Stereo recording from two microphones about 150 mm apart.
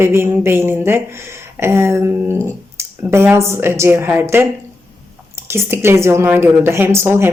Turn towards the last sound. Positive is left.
turn(degrees=-15)  # may be behind; listen again after turning